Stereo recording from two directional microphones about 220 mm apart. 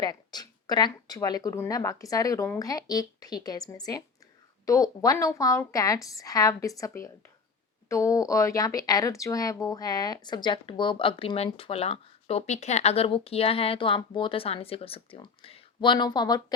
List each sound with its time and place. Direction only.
0.0 s speech: 20° left (ahead or behind)